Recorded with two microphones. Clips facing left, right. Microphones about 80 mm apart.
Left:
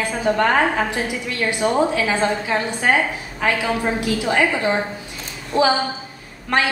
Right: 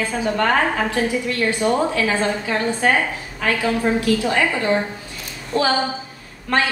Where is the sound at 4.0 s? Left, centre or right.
Left.